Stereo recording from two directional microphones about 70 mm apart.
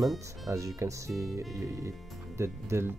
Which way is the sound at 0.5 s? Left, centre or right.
Right.